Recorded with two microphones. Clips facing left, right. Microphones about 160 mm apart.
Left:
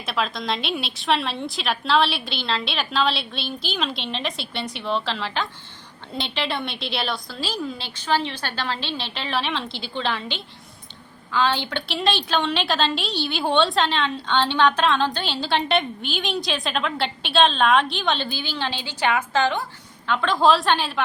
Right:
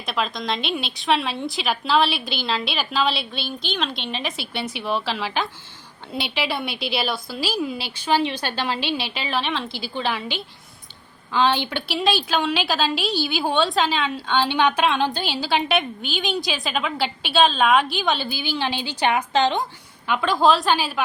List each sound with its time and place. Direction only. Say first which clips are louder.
0.0 s a woman's voice: even; centre (ahead or behind)
11.3 s a woman's voice: right 2 dB; 15° right (ahead or behind)
11.9 s a woman's voice: right 1 dB; centre (ahead or behind); by 19.6 s 20° right (ahead or behind)
20.1 s a woman's voice: even; 10° right (ahead or behind)